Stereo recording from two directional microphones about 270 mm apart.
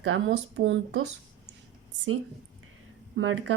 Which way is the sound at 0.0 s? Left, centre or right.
Right.